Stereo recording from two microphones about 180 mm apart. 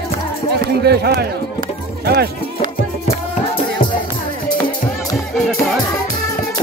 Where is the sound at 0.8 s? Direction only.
65° right (ahead or behind).